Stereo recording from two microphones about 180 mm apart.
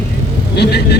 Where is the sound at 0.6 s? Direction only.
65° left (ahead or behind).